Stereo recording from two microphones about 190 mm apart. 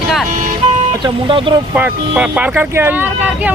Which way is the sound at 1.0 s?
25° right (ahead or behind).